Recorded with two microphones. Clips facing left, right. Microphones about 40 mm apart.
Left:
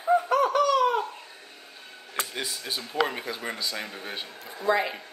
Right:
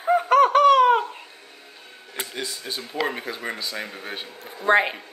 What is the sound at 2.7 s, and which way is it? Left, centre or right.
Speech, centre.